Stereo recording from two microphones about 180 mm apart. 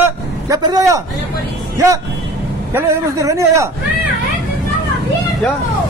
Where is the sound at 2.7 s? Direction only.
15° right (ahead or behind).